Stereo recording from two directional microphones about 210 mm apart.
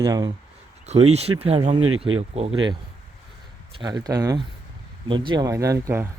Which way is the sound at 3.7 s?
20° right (ahead or behind).